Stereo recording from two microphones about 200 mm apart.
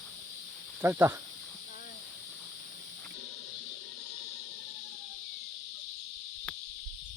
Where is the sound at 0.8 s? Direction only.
10° right (ahead or behind).